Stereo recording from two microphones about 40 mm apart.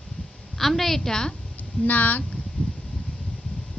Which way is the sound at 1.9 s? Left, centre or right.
Left.